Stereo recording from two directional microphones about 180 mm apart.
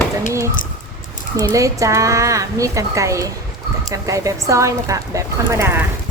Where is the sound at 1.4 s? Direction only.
20° right (ahead or behind).